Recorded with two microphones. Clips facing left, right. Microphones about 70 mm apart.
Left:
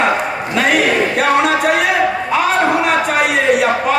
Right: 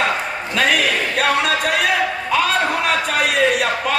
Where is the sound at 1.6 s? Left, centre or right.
Left.